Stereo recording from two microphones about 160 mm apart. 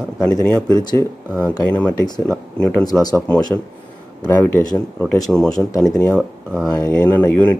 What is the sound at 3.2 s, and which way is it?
Speech, 10° left (ahead or behind).